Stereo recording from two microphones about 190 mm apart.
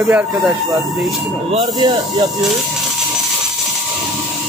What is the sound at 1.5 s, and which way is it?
Speech, 25° right (ahead or behind).